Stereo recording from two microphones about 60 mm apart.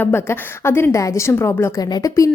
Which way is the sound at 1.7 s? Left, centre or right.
Left.